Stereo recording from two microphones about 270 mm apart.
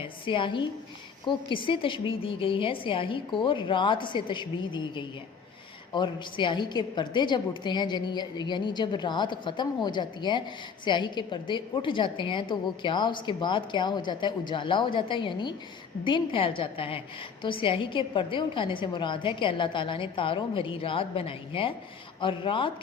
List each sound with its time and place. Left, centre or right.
0.0 s a woman's voice: centre